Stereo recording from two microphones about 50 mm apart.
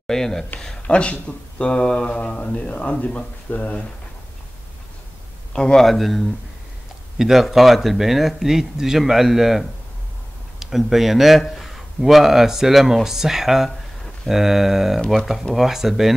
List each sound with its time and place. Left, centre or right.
0.0 s speech: centre; by 3.8 s left
5.5 s speech: centre
5.8 s speech: centre